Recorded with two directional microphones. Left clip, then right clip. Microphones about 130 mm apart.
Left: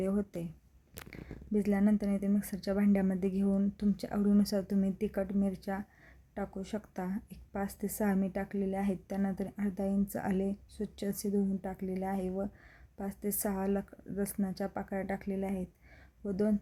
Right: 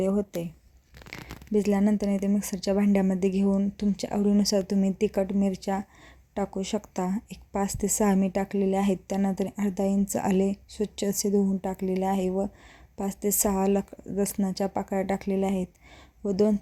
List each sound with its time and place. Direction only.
1.1 s a woman's voice: 35° right (ahead or behind)